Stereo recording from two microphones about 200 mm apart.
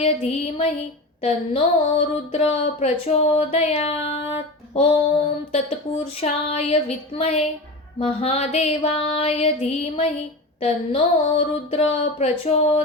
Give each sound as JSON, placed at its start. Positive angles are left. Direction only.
{"t": 0.0, "sound": "speech", "side_deg": 30}